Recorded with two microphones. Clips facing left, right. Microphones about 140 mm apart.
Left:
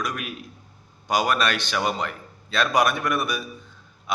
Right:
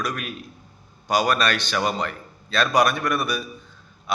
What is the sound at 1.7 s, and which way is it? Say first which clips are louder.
A man's voice: right 1 dB; 10° left (ahead or behind).